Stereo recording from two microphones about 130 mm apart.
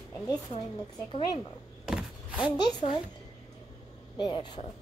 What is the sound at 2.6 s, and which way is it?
Speech, 40° left (ahead or behind).